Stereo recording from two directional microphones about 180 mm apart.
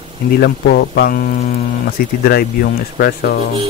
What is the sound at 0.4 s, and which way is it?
Speech, 65° left (ahead or behind).